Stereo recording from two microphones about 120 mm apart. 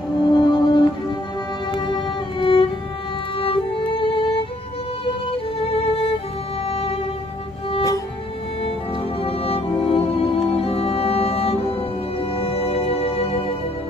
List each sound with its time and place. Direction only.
0.2 s music: 40° left (ahead or behind)
5.7 s music: 50° left (ahead or behind)
9.2 s music: 55° left (ahead or behind)